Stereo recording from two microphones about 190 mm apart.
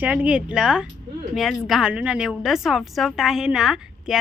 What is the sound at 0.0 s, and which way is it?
A woman's voice, 10° right (ahead or behind).